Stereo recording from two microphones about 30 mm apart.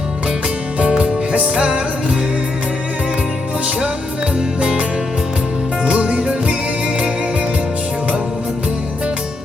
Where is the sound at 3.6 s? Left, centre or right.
Right.